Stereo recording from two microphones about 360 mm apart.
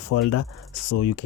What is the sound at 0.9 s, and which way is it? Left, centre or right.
Speech, left.